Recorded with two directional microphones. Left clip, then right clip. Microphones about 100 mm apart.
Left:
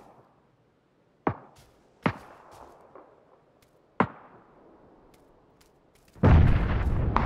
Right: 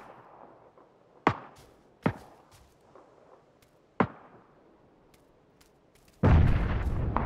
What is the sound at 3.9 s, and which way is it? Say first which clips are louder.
Arrow: left 2 dB; 25° left (ahead or behind).